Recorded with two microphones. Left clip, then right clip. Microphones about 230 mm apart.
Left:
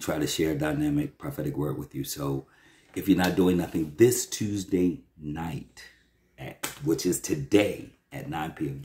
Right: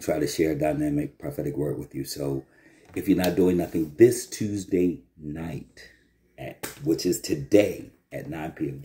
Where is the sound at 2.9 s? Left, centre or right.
Centre.